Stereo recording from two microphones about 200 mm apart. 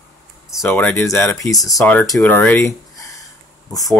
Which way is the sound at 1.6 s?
5° left (ahead or behind).